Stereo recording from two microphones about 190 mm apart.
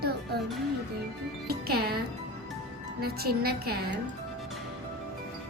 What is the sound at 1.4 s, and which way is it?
A woman's voice, 55° right (ahead or behind).